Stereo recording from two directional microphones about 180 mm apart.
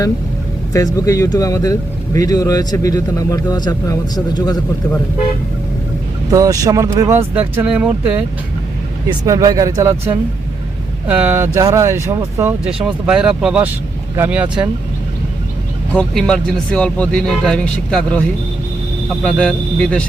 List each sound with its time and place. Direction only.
0.7 s speech: 20° left (ahead or behind)
6.3 s speech: 20° right (ahead or behind)
9.0 s speech: 20° right (ahead or behind)
15.9 s speech: 5° left (ahead or behind)